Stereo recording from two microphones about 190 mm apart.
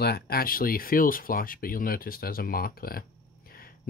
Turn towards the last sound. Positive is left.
turn(degrees=50)  # may be behind; listen again after turning